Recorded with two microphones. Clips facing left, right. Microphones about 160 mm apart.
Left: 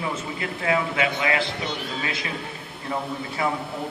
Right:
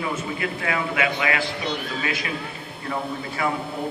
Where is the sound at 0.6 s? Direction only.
25° left (ahead or behind).